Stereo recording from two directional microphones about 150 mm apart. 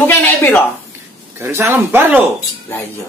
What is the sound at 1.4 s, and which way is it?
Speech, 15° right (ahead or behind).